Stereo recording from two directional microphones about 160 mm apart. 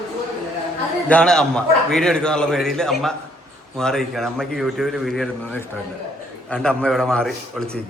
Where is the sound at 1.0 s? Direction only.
5° left (ahead or behind).